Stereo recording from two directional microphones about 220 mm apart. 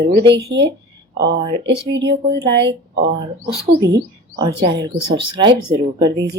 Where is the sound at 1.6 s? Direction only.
50° right (ahead or behind).